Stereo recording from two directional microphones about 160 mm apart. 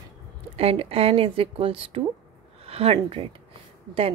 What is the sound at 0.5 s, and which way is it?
A woman's voice, 40° right (ahead or behind).